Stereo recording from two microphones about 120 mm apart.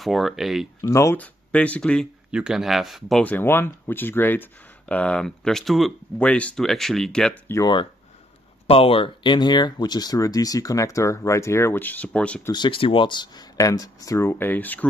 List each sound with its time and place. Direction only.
0.0 s speech: centre (ahead or behind)
0.7 s speech: 25° left (ahead or behind)
1.1 s speech: 10° left (ahead or behind)
2.3 s speech: 5° right (ahead or behind)
3.3 s speech: 15° left (ahead or behind)
7.6 s speech: 40° left (ahead or behind)
8.6 s speech: 50° left (ahead or behind); by 12.4 s 10° left (ahead or behind)
12.4 s speech: 40° left (ahead or behind); by 14.9 s 15° left (ahead or behind)